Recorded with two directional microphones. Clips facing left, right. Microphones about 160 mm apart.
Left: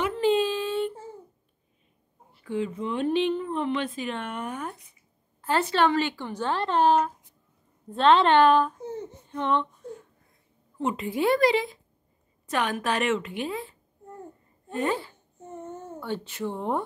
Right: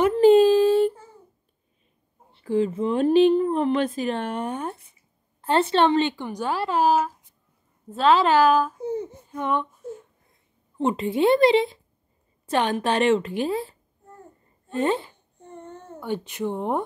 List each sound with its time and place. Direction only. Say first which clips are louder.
0.0 s a sound: right 9 dB; 40° right (ahead or behind)
2.3 s speech: right 7 dB; 35° right (ahead or behind); by 9.9 s 10° right (ahead or behind)
10.8 s a woman's voice: right 5 dB; 30° right (ahead or behind)
14.8 s a woman's voice: right 4 dB; 25° right (ahead or behind)
15.3 s a sound: left 2 dB; 5° left (ahead or behind)
16.0 s speech: right 4 dB; 15° right (ahead or behind)